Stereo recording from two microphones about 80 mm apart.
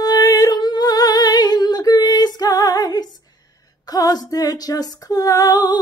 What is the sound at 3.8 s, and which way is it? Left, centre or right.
Female singing, left.